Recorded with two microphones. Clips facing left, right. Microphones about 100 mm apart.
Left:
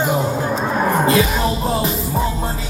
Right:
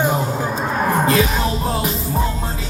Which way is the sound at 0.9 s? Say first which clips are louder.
Left 1 dB; centre (ahead or behind).